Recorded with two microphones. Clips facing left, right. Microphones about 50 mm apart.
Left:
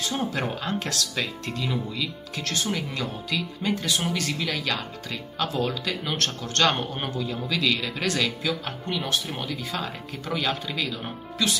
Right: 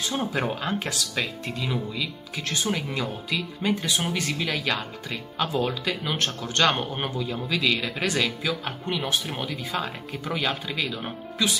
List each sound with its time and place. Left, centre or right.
0.1 s speech: centre